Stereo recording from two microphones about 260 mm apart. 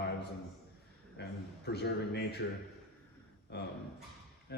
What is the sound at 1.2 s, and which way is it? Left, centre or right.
Speech, left.